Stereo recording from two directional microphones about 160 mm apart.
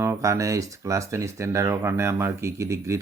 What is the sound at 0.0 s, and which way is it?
Speech, 20° right (ahead or behind).